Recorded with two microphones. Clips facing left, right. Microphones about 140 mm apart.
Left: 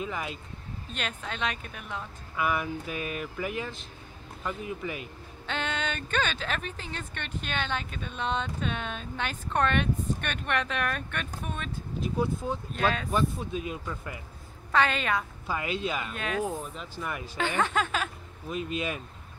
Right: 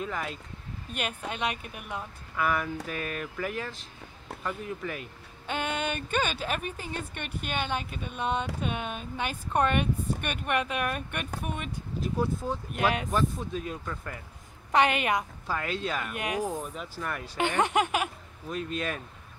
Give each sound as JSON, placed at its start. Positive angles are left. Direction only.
{"t": 0.0, "sound": "speech", "side_deg": 5}
{"t": 0.9, "sound": "a woman's voice", "side_deg": -10}
{"t": 2.3, "sound": "speech", "side_deg": 5}
{"t": 5.5, "sound": "a woman's voice", "side_deg": -10}
{"t": 12.0, "sound": "speech", "side_deg": 0}
{"t": 14.7, "sound": "a woman's voice", "side_deg": -15}
{"t": 15.4, "sound": "speech", "side_deg": 5}
{"t": 16.1, "sound": "a woman's voice", "side_deg": -15}
{"t": 18.5, "sound": "speech", "side_deg": 5}